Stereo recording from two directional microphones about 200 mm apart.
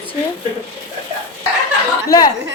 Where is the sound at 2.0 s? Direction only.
20° left (ahead or behind).